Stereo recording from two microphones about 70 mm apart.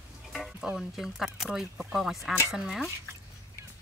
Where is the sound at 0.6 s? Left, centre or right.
Centre.